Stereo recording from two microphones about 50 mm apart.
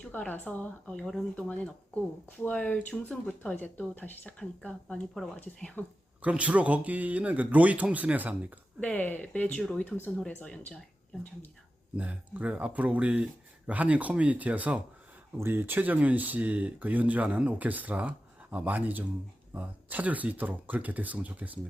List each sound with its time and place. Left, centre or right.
0.0 s speech: left
0.9 s speech: centre
2.5 s speech: left
3.1 s speech: centre
3.5 s speech: left
4.4 s speech: left
5.8 s speech: left
6.2 s speech: right
8.8 s speech: left
10.4 s speech: left
11.9 s speech: right
15.4 s speech: right